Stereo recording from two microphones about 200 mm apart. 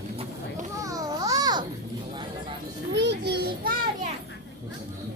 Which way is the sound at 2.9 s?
60° right (ahead or behind).